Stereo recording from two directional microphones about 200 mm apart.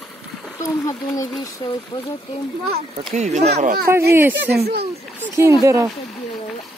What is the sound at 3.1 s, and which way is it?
Speech, 35° right (ahead or behind).